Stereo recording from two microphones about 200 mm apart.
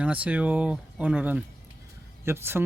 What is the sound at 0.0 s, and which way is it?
Speech, 5° right (ahead or behind).